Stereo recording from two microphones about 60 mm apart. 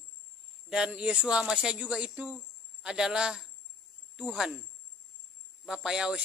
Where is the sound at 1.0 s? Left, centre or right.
Centre.